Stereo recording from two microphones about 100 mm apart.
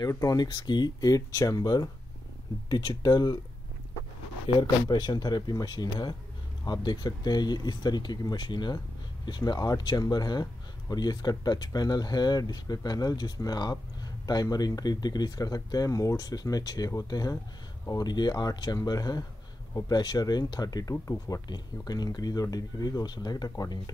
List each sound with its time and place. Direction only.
0.1 s speech: 35° left (ahead or behind)
4.6 s speech: 45° left (ahead or behind)